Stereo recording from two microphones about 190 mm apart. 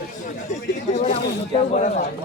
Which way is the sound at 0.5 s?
40° left (ahead or behind).